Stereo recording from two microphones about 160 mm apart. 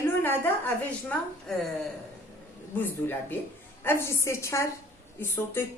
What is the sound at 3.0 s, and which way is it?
A woman's voice, 10° left (ahead or behind).